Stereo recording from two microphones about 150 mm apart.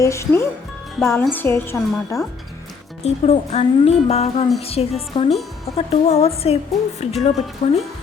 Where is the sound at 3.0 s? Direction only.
45° left (ahead or behind).